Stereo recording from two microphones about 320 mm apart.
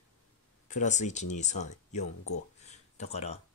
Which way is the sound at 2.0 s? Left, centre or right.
Left.